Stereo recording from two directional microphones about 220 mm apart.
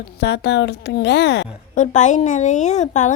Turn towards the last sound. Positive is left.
turn(degrees=35)  # may be behind; listen again after turning